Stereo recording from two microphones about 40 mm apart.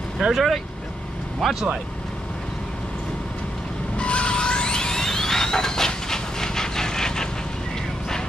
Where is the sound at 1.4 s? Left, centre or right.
Centre.